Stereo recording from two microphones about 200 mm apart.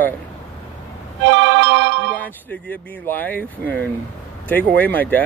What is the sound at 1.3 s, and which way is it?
Music, 65° right (ahead or behind).